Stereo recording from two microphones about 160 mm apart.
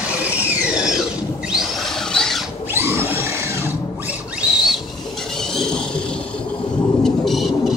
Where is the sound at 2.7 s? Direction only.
15° right (ahead or behind).